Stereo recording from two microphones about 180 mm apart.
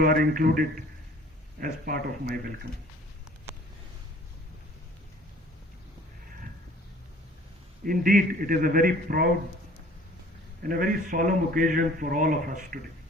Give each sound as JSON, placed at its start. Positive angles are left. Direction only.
{"t": 0.0, "sound": "a man's voice", "side_deg": -50}
{"t": 1.6, "sound": "a man's voice", "side_deg": -55}
{"t": 7.9, "sound": "a man's voice", "side_deg": -50}
{"t": 10.6, "sound": "a man's voice", "side_deg": -50}